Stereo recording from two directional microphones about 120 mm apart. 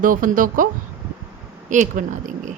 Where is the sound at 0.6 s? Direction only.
90° right.